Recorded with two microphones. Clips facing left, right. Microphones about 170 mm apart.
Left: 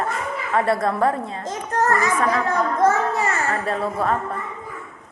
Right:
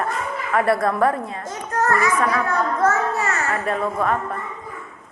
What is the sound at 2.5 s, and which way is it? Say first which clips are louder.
Speech: left 1 dB; 15° left (ahead or behind).